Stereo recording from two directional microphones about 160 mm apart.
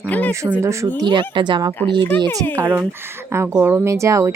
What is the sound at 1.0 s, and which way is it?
Speech, 30° right (ahead or behind).